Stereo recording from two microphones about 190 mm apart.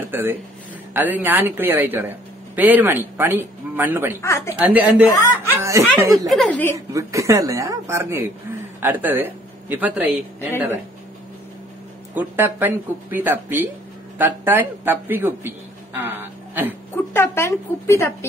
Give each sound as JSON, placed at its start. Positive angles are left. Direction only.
{"t": 0.1, "sound": "speech", "side_deg": -10}
{"t": 4.2, "sound": "speech", "side_deg": 15}
{"t": 4.6, "sound": "speech", "side_deg": -5}
{"t": 6.2, "sound": "a woman's voice", "side_deg": 0}
{"t": 6.9, "sound": "speech", "side_deg": -15}
{"t": 12.2, "sound": "a woman's voice", "side_deg": -10}
{"t": 16.9, "sound": "speech", "side_deg": 10}